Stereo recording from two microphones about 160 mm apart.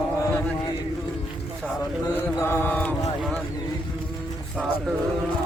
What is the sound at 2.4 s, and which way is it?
Mantra, 15° left (ahead or behind).